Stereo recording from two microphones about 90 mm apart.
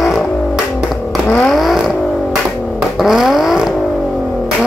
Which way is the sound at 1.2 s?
20° left (ahead or behind).